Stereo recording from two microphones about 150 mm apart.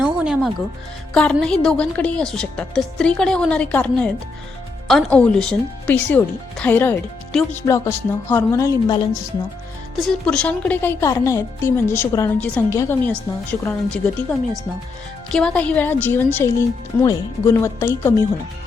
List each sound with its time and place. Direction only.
0.0 s music: 5° right (ahead or behind)
1.1 s a woman's voice: 5° left (ahead or behind); by 9.2 s 25° left (ahead or behind)
10.0 s speech: 5° left (ahead or behind)